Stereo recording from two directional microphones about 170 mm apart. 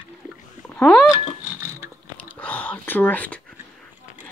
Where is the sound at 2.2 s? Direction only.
10° left (ahead or behind).